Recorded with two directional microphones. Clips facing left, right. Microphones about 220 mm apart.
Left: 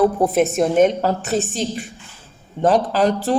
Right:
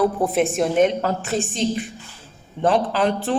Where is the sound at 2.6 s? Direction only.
40° left (ahead or behind).